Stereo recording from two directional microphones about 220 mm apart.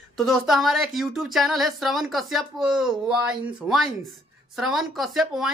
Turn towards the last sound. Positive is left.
turn(degrees=0)  # may be behind; listen again after turning